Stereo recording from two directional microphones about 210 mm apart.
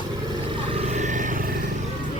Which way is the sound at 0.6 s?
30° right (ahead or behind).